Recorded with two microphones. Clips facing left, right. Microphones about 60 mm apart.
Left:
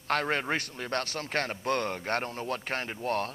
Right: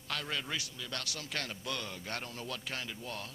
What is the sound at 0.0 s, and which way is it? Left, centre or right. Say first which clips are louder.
A man's voice: left 10 dB; left.